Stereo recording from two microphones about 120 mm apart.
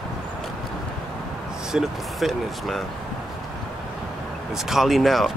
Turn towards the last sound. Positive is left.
turn(degrees=0)  # may be behind; listen again after turning